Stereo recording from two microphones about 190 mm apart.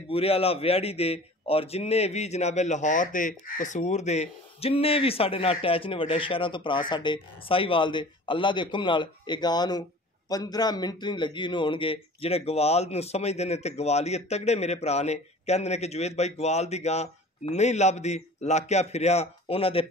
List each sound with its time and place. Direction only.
0.1 s a man's voice: 30° left (ahead or behind)